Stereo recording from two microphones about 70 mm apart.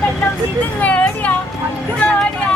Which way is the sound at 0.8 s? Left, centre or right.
Left.